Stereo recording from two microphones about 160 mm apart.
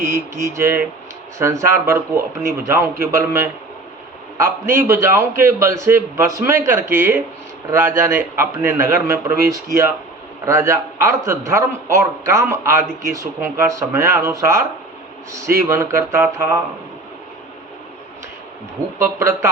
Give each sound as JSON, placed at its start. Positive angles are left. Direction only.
{"t": 0.1, "sound": "a man's voice", "side_deg": -15}
{"t": 18.9, "sound": "a man's voice", "side_deg": -15}